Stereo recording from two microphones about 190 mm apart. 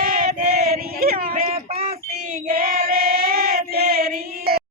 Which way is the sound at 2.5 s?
50° right (ahead or behind).